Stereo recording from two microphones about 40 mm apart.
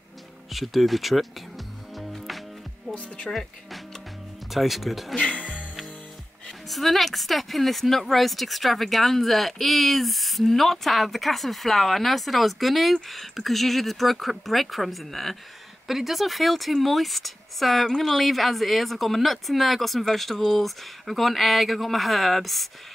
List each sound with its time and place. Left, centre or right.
0.5 s speech: centre
2.0 s music: centre
2.9 s speech: left
3.3 s speech: centre
4.5 s speech: centre
5.1 s speech: left
6.7 s speech: centre